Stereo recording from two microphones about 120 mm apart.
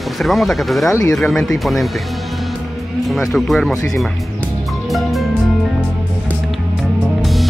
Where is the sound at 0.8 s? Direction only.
25° left (ahead or behind).